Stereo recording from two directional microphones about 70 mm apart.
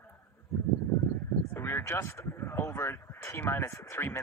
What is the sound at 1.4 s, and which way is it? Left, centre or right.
Speech, left.